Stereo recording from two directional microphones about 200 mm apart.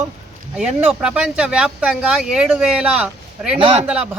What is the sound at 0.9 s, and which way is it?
Speech, 5° right (ahead or behind).